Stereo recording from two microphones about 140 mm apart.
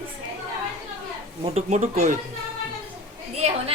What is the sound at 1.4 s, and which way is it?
Speech, 50° right (ahead or behind).